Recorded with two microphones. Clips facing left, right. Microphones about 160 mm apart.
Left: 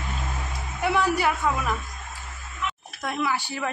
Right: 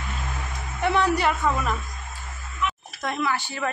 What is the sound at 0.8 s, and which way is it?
Speech, 5° left (ahead or behind).